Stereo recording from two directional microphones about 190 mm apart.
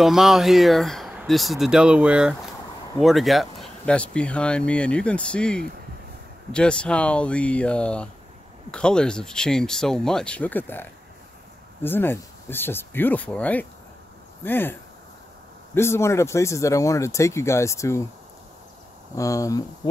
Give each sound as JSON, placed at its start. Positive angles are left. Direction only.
{"t": 0.0, "sound": "speech", "side_deg": 0}
{"t": 19.1, "sound": "speech", "side_deg": 15}